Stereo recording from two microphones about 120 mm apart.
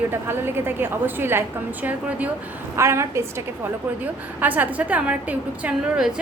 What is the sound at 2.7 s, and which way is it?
A woman's voice, 25° right (ahead or behind).